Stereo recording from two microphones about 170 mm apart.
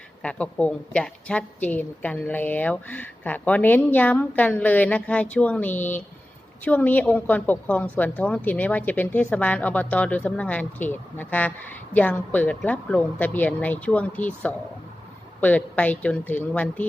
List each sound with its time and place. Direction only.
0.2 s a woman's voice: 5° left (ahead or behind)